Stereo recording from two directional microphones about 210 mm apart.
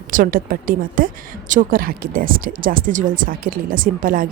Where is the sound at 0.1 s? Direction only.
40° right (ahead or behind).